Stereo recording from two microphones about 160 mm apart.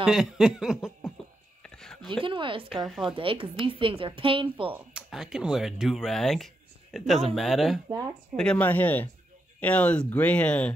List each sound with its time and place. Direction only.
0.0 s speech: 5° right (ahead or behind)
1.6 s a sound: 5° left (ahead or behind)
2.0 s a woman's voice: 30° right (ahead or behind)
2.8 s speech: 5° right (ahead or behind)
3.2 s a woman's voice: 35° right (ahead or behind)
4.7 s speech: 5° right (ahead or behind)